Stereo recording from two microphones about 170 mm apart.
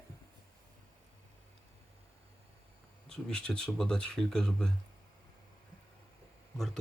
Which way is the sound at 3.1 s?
5° left (ahead or behind).